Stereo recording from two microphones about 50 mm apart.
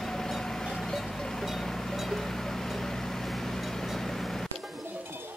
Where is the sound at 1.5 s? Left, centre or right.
Centre.